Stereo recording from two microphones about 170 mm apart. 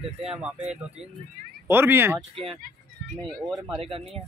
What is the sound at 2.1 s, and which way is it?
Speech, 35° right (ahead or behind).